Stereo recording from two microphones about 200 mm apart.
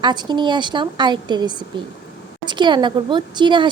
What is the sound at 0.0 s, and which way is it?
Speech, 20° right (ahead or behind).